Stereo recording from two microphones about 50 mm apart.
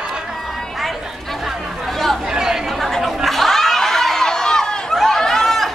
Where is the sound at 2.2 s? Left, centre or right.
Centre.